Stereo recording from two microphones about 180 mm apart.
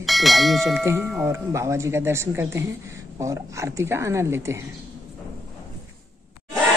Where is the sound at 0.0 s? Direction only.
Centre (ahead or behind).